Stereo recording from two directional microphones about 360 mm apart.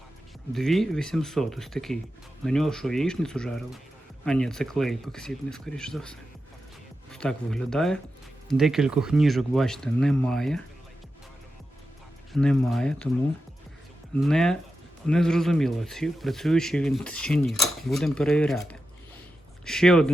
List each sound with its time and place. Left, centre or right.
0.5 s speech: centre
12.3 s speech: centre
14.2 s speech: centre